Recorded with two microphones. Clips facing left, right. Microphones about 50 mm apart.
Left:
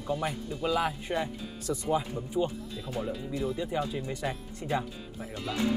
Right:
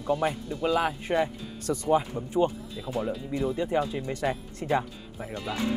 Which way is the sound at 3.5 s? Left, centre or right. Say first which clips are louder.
Right 4 dB; right.